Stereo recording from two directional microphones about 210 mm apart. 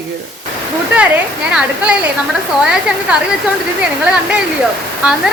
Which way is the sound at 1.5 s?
5° right (ahead or behind).